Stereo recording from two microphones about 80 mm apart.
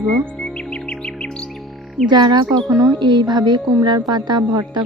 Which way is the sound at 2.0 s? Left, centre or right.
Right.